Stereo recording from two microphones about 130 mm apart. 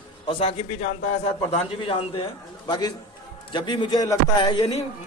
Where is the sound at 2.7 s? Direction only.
35° left (ahead or behind).